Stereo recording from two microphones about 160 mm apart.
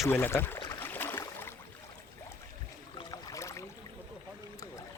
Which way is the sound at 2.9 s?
20° left (ahead or behind).